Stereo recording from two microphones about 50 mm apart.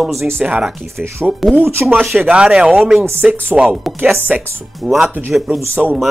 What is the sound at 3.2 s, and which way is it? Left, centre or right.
Speech, right.